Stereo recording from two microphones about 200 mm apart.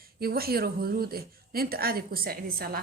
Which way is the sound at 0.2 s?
50° right (ahead or behind).